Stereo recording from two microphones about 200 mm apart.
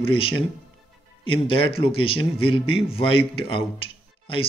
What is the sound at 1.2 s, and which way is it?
A man's voice, 25° left (ahead or behind).